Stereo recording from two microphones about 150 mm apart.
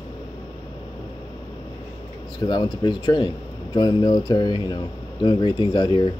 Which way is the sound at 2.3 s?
30° left (ahead or behind).